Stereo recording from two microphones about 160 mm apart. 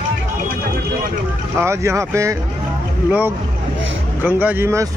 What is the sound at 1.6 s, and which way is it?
Speech, 15° right (ahead or behind).